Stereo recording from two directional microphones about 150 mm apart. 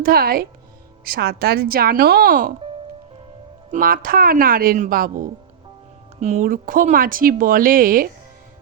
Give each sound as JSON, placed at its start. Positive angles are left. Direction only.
{"t": 0.0, "sound": "speech", "side_deg": -80}
{"t": 1.0, "sound": "a woman's voice", "side_deg": -90}
{"t": 3.7, "sound": "a woman's voice", "side_deg": -70}
{"t": 6.1, "sound": "speech", "side_deg": -50}
{"t": 6.5, "sound": "a woman's voice", "side_deg": -65}